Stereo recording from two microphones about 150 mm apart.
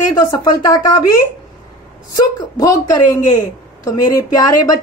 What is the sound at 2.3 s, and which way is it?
Speech, 25° left (ahead or behind).